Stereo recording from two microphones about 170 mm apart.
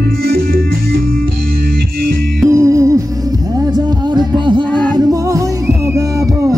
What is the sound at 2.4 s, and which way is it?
Music, 15° right (ahead or behind).